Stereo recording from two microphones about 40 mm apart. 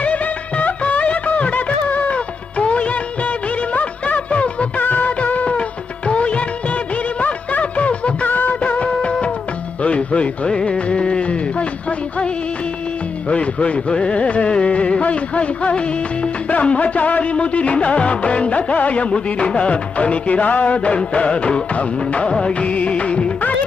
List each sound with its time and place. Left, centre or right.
0.0 s music: left
2.1 s music of bollywood: left
4.8 s music: left
6.1 s music of bollywood: left
8.3 s music: left
8.6 s music: left
22.6 s music: left